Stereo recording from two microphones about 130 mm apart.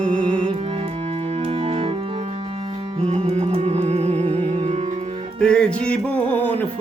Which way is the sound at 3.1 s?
50° right (ahead or behind).